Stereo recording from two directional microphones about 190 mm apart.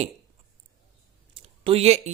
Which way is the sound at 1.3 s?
30° right (ahead or behind).